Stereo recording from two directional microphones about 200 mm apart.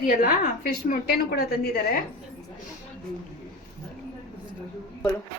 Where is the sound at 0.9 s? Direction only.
50° left (ahead or behind).